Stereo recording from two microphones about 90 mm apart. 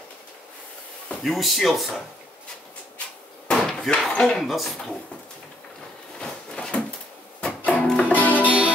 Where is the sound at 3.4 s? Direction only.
5° left (ahead or behind).